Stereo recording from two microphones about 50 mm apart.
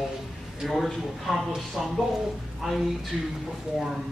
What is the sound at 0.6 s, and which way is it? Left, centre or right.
A man's voice, centre.